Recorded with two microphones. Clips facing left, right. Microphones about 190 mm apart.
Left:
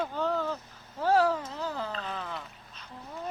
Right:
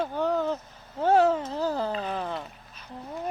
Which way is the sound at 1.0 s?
25° right (ahead or behind).